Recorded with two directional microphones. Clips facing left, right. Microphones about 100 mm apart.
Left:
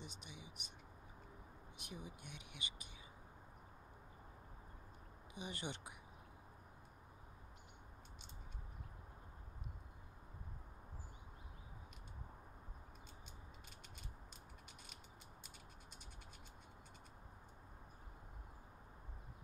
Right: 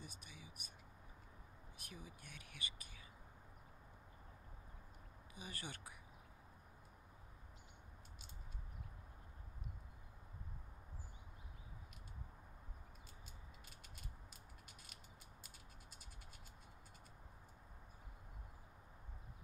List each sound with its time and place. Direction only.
0.0 s speech: 20° left (ahead or behind)
1.8 s speech: 20° left (ahead or behind)
5.3 s speech: 20° left (ahead or behind)